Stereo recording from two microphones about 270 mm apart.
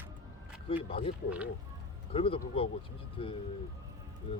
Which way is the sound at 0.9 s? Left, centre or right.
Left.